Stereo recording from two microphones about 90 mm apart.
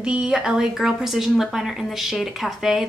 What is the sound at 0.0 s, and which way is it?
A woman's voice, 10° right (ahead or behind).